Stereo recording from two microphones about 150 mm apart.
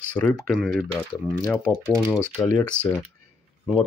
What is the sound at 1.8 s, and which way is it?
Speech, 20° right (ahead or behind).